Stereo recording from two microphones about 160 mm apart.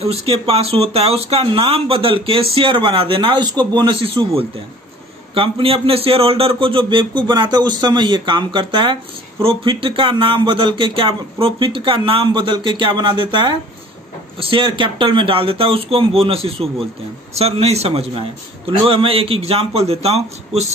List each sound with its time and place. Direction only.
0.0 s speech: 40° right (ahead or behind)